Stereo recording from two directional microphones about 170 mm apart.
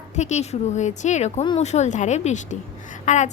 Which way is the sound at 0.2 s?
45° left (ahead or behind).